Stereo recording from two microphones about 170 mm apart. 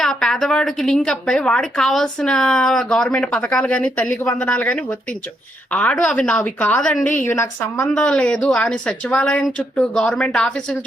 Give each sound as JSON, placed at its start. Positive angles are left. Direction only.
{"t": 0.0, "sound": "a woman's voice", "side_deg": 5}
{"t": 7.9, "sound": "a woman's voice", "side_deg": 5}